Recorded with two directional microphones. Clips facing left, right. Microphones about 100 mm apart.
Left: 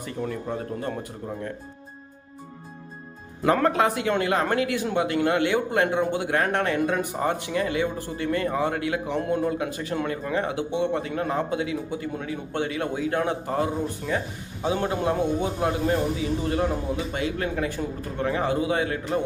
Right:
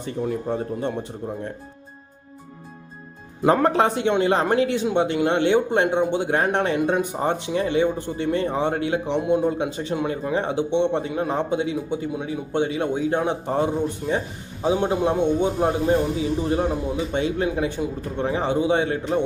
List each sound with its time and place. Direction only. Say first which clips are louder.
0.3 s a man's voice: right 7 dB; 30° right (ahead or behind)
3.4 s a man's voice: right 3 dB; 30° right (ahead or behind)